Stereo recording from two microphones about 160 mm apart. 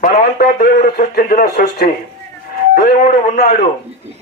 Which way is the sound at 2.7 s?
60° left (ahead or behind).